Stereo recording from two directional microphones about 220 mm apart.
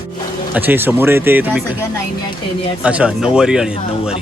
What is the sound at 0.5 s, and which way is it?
Speech, 10° right (ahead or behind).